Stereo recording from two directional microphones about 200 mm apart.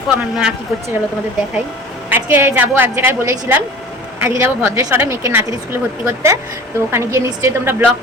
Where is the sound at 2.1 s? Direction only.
10° right (ahead or behind).